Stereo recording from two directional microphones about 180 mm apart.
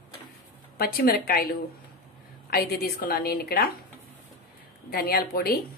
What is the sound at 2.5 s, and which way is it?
A woman's voice, 55° left (ahead or behind).